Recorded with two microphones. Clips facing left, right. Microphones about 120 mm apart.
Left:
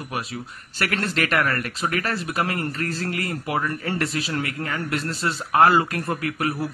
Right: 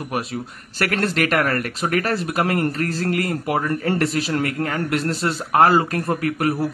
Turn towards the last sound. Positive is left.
turn(degrees=-35)  # may be behind; listen again after turning